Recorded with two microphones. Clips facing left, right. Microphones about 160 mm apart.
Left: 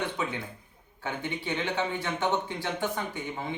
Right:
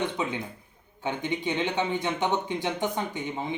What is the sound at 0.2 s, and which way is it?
Speech, 20° right (ahead or behind).